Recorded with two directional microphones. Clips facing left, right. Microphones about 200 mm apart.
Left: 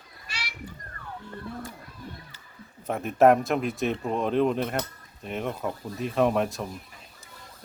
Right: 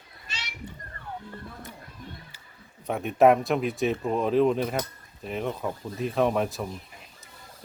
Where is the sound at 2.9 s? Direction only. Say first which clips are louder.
Even; centre (ahead or behind).